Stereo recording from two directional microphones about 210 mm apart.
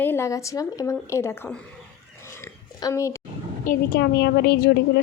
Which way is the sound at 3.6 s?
45° left (ahead or behind).